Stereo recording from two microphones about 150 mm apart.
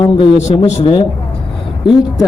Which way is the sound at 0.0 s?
35° left (ahead or behind).